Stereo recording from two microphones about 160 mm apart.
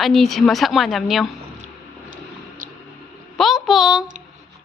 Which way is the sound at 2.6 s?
60° right (ahead or behind).